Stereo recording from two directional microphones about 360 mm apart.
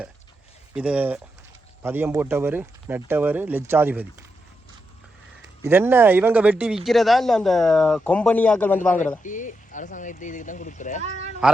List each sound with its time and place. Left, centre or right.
0.7 s speech: centre
5.6 s speech: centre
9.2 s speech: left
11.4 s speech: centre